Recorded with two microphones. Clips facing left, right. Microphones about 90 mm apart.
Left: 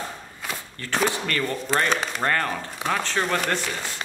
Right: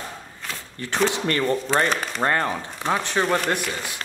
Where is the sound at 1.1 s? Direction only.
30° right (ahead or behind).